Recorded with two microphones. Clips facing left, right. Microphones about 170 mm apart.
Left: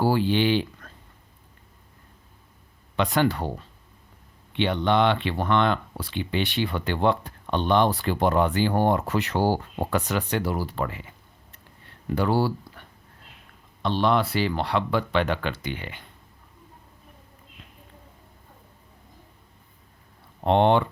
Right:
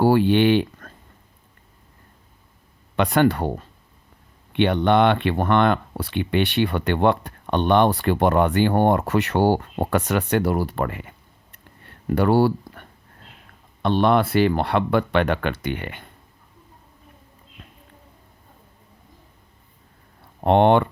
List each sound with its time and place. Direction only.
0.0 s speech: 60° right (ahead or behind)
2.9 s speech: 55° right (ahead or behind)
11.9 s a sound: 55° right (ahead or behind)
13.8 s speech: 55° right (ahead or behind)
20.4 s speech: 55° right (ahead or behind)